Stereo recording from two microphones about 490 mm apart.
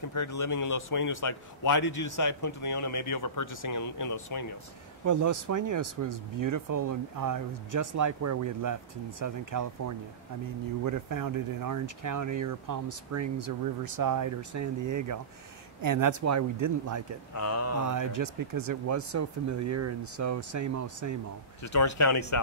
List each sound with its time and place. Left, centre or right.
0.1 s speech: left
5.0 s speech: right
17.4 s speech: left
17.8 s speech: right
21.7 s speech: left